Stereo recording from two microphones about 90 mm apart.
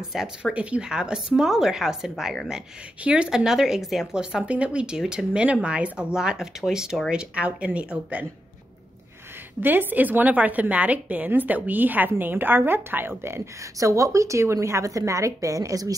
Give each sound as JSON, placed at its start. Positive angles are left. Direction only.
{"t": 0.1, "sound": "a woman's voice", "side_deg": -10}
{"t": 9.6, "sound": "a woman's voice", "side_deg": -20}